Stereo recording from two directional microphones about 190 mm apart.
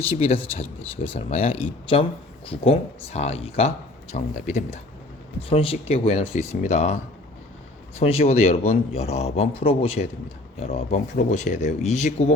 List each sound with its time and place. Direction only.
0.0 s speech: 30° left (ahead or behind)